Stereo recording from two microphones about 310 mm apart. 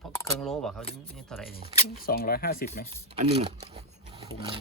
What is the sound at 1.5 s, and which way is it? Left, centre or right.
Speech, left.